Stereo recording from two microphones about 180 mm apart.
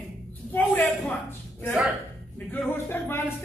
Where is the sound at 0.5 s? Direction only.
10° left (ahead or behind).